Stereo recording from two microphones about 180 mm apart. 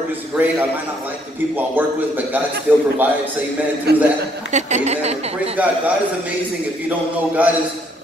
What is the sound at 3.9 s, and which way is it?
Speech, 65° right (ahead or behind).